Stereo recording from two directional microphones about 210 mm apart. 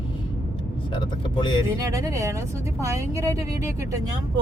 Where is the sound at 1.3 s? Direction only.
25° left (ahead or behind).